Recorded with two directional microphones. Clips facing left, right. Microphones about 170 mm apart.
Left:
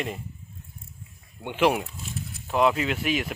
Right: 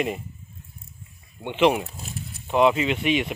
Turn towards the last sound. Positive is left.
turn(degrees=0)  # may be behind; listen again after turning